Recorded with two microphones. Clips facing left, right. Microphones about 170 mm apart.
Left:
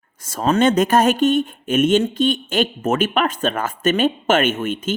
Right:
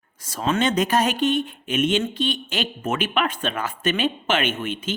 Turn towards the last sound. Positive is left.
turn(degrees=50)  # may be behind; listen again after turning